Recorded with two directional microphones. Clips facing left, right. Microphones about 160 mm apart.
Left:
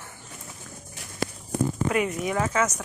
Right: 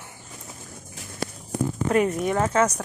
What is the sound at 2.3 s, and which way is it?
Speech, 30° right (ahead or behind).